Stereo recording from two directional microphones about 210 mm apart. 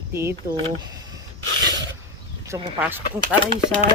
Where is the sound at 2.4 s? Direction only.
15° right (ahead or behind).